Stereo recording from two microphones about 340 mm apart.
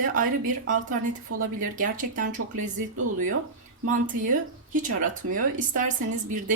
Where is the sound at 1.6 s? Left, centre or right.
Right.